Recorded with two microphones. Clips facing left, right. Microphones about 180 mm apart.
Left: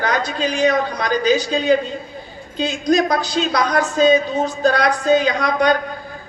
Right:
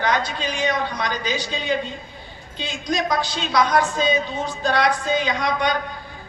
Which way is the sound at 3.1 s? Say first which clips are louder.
Left 2 dB; 40° left (ahead or behind).